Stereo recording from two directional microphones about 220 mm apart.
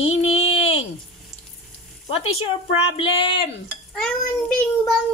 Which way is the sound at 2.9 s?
25° left (ahead or behind).